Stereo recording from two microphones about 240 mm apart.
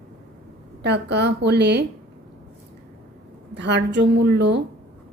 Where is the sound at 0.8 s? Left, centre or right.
Right.